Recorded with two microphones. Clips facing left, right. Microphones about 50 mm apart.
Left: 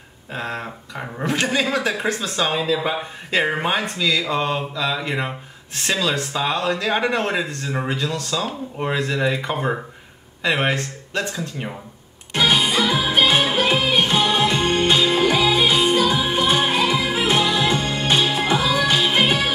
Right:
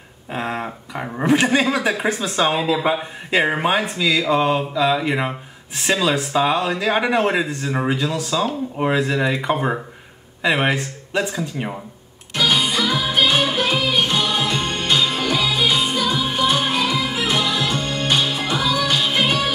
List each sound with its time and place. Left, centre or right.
0.3 s speech: centre
12.4 s music: centre